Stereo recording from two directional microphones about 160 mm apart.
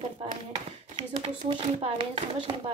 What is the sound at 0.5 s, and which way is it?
Speech, 30° right (ahead or behind).